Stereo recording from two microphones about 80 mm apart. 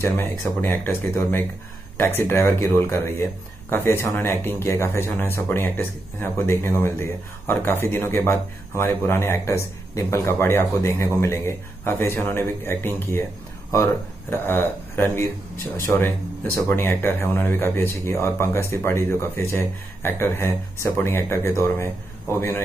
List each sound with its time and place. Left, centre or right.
0.0 s speech: left
14.3 s speech: left